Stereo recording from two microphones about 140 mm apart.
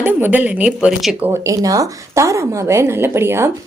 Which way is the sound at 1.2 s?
20° right (ahead or behind).